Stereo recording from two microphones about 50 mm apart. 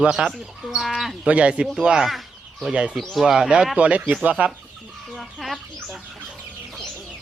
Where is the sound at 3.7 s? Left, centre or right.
Right.